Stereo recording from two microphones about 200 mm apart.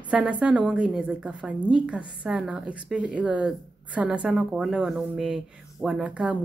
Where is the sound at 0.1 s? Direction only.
5° right (ahead or behind).